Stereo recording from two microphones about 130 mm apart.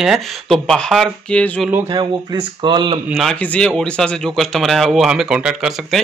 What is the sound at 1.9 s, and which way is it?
Speech, 35° right (ahead or behind).